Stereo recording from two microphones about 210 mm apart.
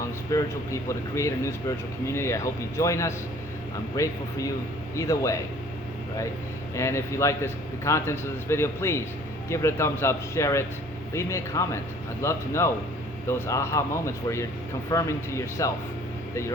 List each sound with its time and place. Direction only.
0.3 s speech: 15° left (ahead or behind)
6.7 s speech: 15° left (ahead or behind)